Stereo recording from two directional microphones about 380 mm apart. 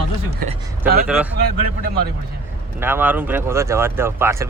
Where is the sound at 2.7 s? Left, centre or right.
Centre.